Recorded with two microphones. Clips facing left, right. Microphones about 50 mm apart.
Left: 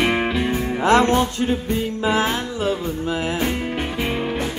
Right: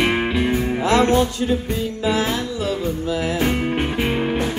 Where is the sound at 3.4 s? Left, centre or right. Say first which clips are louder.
Right 3 dB; centre.